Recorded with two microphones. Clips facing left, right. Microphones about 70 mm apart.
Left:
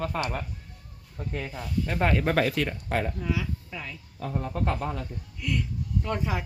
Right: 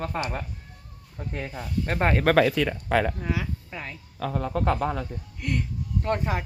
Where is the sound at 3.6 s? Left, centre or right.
Right.